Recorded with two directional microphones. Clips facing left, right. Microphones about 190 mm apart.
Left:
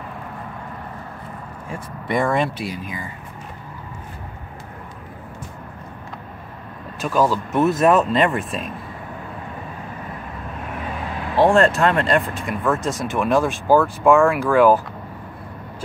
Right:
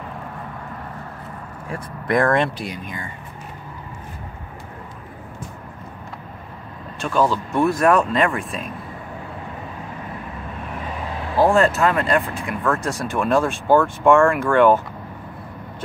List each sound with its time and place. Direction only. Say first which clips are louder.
1.7 s speech: right 2 dB; centre (ahead or behind)
7.0 s speech: left 1 dB; 5° left (ahead or behind)
7.6 s speech: left 1 dB; 25° left (ahead or behind)
8.0 s speech: left 1 dB; centre (ahead or behind)
11.3 s speech: left 1 dB; centre (ahead or behind)